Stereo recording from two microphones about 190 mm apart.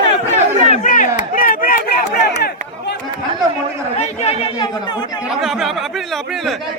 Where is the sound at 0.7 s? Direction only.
40° left (ahead or behind).